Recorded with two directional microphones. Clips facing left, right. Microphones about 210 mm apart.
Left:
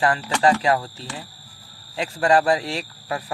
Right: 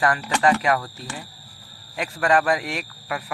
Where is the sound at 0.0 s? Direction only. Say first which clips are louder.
Left 1 dB; 30° left (ahead or behind).